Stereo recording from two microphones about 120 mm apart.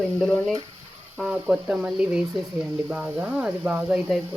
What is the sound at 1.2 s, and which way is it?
Speech, 5° right (ahead or behind).